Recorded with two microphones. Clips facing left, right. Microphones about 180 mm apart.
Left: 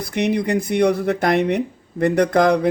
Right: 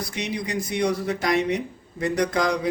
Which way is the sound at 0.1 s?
60° left (ahead or behind).